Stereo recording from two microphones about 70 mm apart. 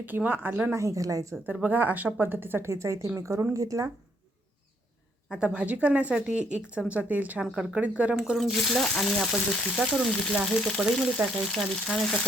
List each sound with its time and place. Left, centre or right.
0.0 s speech: right
0.8 s a woman's voice: right
1.6 s a woman's voice: right
5.3 s speech: centre
8.1 s speech: centre
11.2 s speech: right
11.5 s speech: centre